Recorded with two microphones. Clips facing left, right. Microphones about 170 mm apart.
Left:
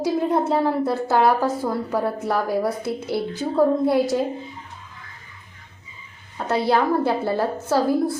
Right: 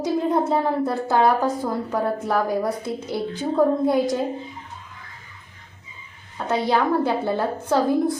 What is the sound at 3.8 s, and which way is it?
Speech, 5° left (ahead or behind).